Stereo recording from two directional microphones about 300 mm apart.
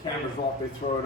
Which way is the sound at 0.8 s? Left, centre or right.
Left.